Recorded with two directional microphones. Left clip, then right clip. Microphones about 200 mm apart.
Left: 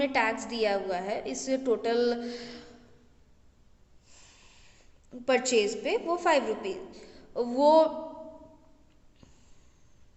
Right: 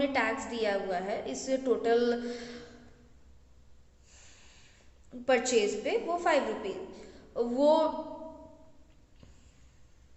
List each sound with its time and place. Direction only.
0.0 s a woman's voice: 50° left (ahead or behind)
5.2 s a woman's voice: 40° left (ahead or behind)